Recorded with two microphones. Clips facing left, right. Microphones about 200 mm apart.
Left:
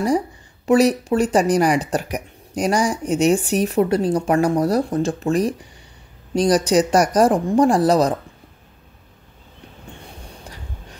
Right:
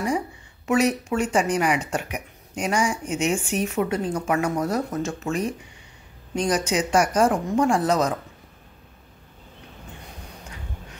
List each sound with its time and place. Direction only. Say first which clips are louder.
0.7 s speech: left 6 dB; 35° left (ahead or behind)